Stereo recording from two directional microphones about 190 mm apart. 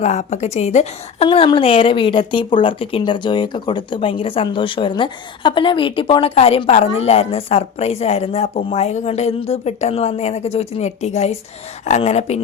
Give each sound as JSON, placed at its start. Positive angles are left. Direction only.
{"t": 0.0, "sound": "a woman's voice", "side_deg": 35}